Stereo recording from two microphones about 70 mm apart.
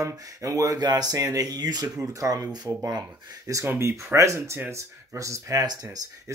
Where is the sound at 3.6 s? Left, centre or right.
Right.